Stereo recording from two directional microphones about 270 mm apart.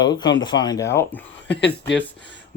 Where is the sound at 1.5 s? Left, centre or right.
Left.